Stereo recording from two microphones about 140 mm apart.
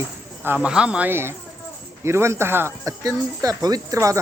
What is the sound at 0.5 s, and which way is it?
Speech, 5° right (ahead or behind).